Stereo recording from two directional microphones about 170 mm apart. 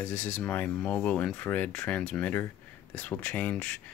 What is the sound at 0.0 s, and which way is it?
Speech, 10° left (ahead or behind).